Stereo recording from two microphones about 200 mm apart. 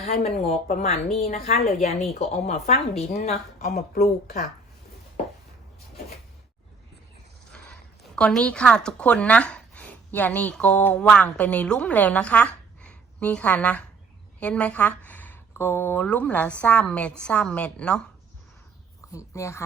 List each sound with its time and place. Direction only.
0.0 s a woman's voice: 35° left (ahead or behind)
7.5 s speech: 5° left (ahead or behind)
19.1 s speech: 15° left (ahead or behind)